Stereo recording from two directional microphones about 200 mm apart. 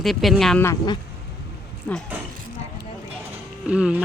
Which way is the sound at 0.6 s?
20° left (ahead or behind).